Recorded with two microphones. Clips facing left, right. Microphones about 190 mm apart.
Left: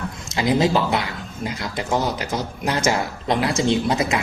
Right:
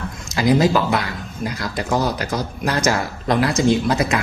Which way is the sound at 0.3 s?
25° left (ahead or behind).